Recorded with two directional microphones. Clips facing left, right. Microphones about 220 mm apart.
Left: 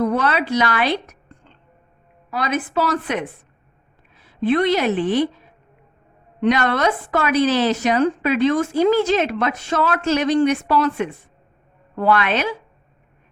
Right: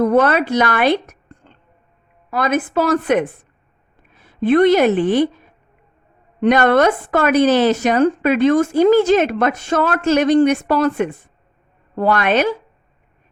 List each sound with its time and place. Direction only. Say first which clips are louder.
0.0 s a woman's voice: right 6 dB; 50° right (ahead or behind)
6.4 s speech: right 5 dB; 50° right (ahead or behind)